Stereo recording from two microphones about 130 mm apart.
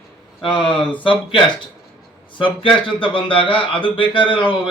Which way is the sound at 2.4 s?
40° left (ahead or behind).